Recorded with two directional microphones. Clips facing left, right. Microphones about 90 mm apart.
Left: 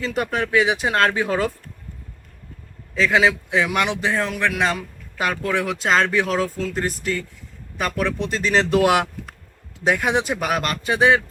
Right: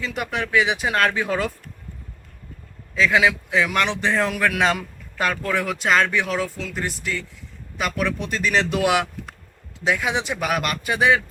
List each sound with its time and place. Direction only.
0.0 s speech: 35° left (ahead or behind)
3.0 s speech: 30° left (ahead or behind)
4.2 s speech: 5° right (ahead or behind)
5.1 s speech: 15° left (ahead or behind)
5.8 s speech: 30° left (ahead or behind)
9.8 s speech: 50° left (ahead or behind)
10.4 s speech: 35° left (ahead or behind)